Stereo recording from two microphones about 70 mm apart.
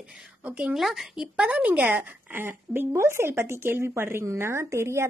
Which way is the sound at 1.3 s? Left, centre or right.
Centre.